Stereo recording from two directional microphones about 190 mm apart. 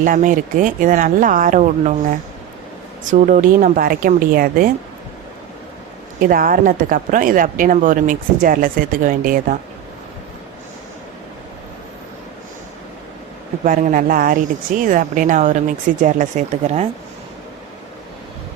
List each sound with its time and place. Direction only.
0.0 s speech: 45° right (ahead or behind)
6.1 s speech: 45° right (ahead or behind)
13.7 s speech: 45° right (ahead or behind)